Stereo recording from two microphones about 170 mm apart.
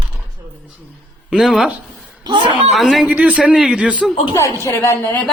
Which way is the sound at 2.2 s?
30° right (ahead or behind).